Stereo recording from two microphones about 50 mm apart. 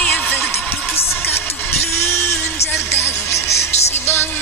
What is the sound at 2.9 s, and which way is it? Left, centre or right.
Music, left.